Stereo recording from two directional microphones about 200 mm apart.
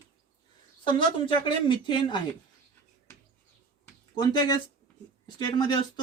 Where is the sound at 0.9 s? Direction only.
25° left (ahead or behind).